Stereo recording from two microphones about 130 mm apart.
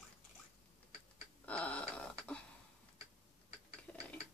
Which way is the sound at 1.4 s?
10° left (ahead or behind).